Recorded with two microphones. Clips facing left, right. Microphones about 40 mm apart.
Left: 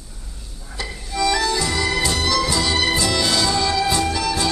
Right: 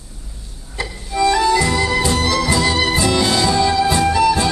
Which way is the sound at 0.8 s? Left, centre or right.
Centre.